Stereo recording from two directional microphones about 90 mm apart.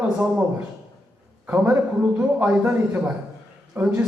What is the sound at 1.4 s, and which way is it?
A man's voice, 20° right (ahead or behind).